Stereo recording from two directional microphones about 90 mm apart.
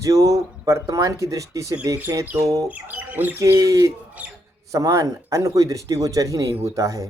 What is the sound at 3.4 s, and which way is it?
Speech, 35° right (ahead or behind).